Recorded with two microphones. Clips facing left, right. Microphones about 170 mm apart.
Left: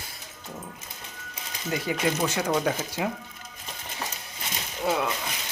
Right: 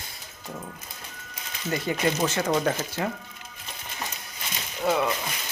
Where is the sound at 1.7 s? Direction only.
5° left (ahead or behind).